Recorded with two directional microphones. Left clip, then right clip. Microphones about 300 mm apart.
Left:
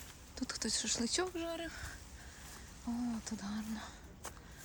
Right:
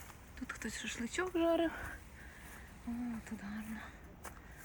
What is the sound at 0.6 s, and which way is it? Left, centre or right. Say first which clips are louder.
Speech: left 6 dB; centre.